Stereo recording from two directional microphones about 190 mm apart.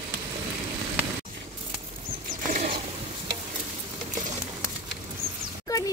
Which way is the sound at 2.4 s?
40° right (ahead or behind).